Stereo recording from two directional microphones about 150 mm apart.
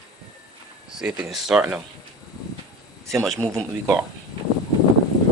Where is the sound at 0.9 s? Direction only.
5° right (ahead or behind).